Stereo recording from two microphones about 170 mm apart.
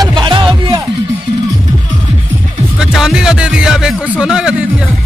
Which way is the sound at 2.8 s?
5° right (ahead or behind).